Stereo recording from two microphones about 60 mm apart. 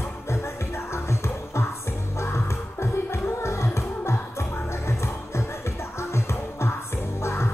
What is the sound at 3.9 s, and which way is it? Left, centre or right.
Music, left.